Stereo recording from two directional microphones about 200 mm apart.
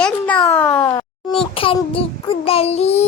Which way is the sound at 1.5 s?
25° left (ahead or behind).